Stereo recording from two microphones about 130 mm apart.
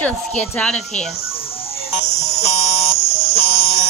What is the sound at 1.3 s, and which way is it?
Music, 45° left (ahead or behind).